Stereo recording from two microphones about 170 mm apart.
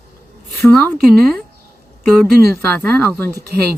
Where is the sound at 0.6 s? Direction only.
10° left (ahead or behind).